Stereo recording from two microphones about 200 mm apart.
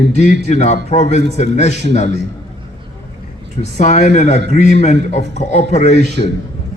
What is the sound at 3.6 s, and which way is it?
A man's voice, 35° left (ahead or behind).